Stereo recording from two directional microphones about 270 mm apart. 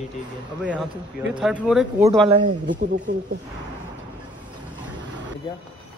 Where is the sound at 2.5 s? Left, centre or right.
Right.